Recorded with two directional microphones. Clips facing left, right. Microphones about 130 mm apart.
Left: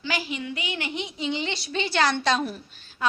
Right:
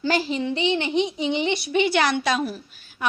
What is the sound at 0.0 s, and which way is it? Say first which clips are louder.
A woman's voice: right 7 dB; 35° right (ahead or behind).